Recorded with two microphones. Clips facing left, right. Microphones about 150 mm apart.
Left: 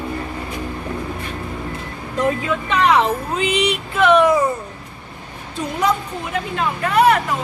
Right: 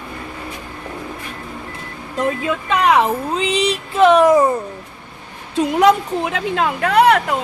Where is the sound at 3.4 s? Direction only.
35° right (ahead or behind).